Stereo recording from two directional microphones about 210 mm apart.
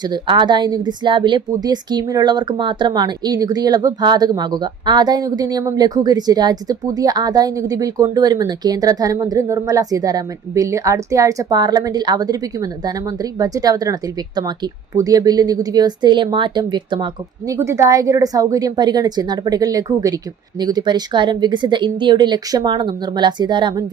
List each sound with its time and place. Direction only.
0.0 s speech: 20° right (ahead or behind)